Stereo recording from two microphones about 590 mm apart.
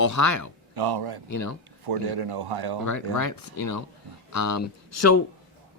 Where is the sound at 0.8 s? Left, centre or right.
Right.